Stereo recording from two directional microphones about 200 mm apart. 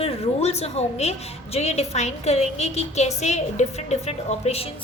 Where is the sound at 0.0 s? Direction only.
30° left (ahead or behind).